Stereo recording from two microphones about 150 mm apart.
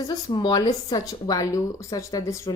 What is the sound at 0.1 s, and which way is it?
A woman's voice, 30° left (ahead or behind).